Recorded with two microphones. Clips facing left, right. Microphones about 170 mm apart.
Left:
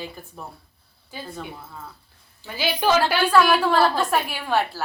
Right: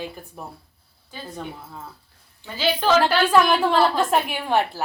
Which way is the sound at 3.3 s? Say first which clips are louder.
Even; 20° right (ahead or behind).